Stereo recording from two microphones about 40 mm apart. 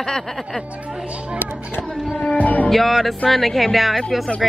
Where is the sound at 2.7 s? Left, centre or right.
Centre.